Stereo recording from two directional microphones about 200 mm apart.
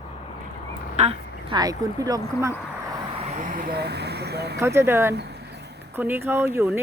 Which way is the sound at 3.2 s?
35° right (ahead or behind).